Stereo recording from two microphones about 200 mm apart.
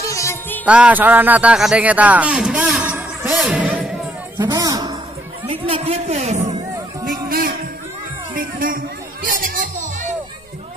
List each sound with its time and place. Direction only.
0.1 s music: 15° left (ahead or behind)
0.7 s speech: 5° right (ahead or behind)
4.4 s speech: 15° right (ahead or behind)
5.5 s speech: 30° right (ahead or behind)
7.1 s speech: 45° right (ahead or behind)
9.3 s music: 40° right (ahead or behind)